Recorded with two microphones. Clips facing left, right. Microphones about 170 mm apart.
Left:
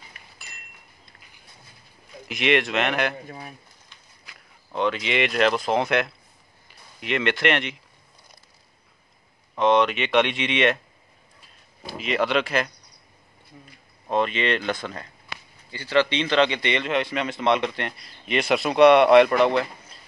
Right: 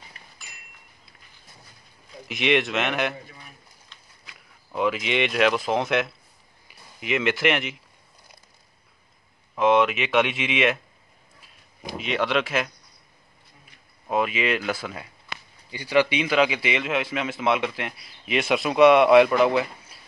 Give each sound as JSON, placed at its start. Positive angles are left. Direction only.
{"t": 0.2, "sound": "a sound", "side_deg": -35}
{"t": 0.5, "sound": "a sound", "side_deg": -10}
{"t": 2.2, "sound": "a man's voice", "side_deg": 0}
{"t": 3.3, "sound": "speech", "side_deg": 55}
{"t": 4.7, "sound": "a man's voice", "side_deg": -5}
{"t": 9.6, "sound": "a man's voice", "side_deg": -5}
{"t": 12.0, "sound": "a man's voice", "side_deg": 0}
{"t": 14.0, "sound": "a man's voice", "side_deg": -5}